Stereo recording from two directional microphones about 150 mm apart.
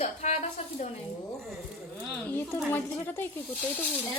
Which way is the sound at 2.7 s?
15° left (ahead or behind).